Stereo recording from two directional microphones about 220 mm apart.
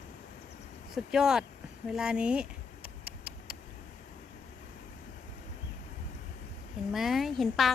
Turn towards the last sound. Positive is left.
turn(degrees=0)  # may be behind; listen again after turning